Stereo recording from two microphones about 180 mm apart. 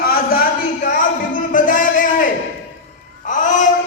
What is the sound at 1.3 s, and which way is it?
Music, 45° left (ahead or behind).